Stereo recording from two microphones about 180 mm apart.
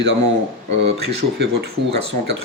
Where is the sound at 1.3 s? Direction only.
70° right (ahead or behind).